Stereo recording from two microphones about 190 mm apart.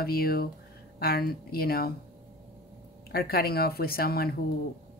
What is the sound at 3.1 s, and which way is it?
Speech, 55° left (ahead or behind).